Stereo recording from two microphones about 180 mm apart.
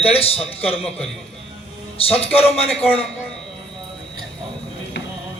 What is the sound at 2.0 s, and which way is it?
Speech, 30° left (ahead or behind).